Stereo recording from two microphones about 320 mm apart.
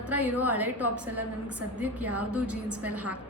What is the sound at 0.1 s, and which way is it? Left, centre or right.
Speech, centre.